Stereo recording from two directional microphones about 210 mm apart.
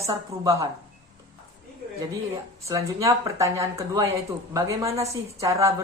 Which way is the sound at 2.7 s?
15° right (ahead or behind).